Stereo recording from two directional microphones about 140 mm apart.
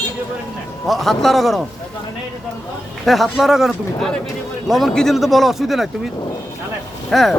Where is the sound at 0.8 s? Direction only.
Centre (ahead or behind).